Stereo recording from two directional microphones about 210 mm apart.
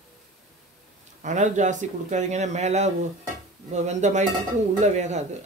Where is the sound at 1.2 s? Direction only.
35° right (ahead or behind).